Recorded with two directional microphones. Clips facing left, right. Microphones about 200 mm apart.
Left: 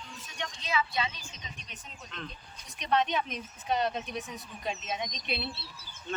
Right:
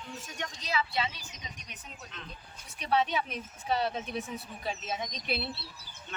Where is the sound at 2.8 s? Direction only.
5° right (ahead or behind).